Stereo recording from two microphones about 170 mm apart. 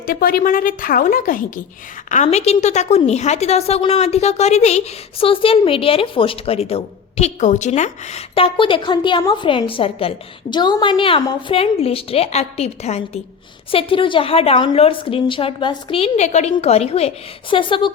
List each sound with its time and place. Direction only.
0.0 s a woman's voice: 60° left (ahead or behind); by 17.9 s 30° left (ahead or behind)